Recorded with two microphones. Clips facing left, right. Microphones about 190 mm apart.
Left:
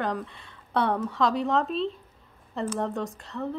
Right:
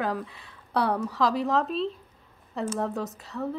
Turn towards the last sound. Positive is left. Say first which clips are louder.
# even
turn(degrees=0)  # may be behind; listen again after turning